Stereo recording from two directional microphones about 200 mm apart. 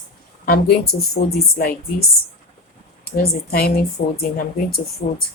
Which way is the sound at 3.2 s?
50° left (ahead or behind).